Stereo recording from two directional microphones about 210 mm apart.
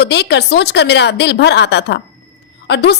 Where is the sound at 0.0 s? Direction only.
55° left (ahead or behind).